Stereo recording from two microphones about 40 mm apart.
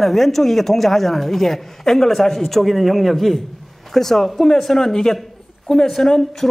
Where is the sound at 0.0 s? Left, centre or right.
Centre.